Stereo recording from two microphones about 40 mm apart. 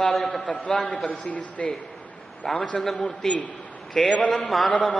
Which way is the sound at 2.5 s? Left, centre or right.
Left.